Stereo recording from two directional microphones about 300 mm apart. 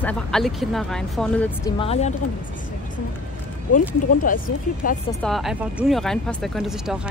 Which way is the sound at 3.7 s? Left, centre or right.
Left.